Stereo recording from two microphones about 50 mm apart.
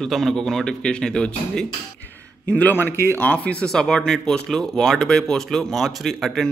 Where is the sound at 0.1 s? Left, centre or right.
Centre.